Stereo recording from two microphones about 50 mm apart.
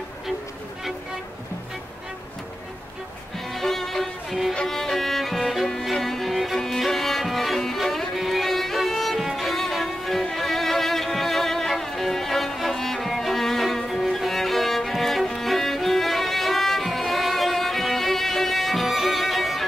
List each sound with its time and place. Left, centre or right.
3.5 s music: centre
9.2 s violin: centre
10.3 s music: centre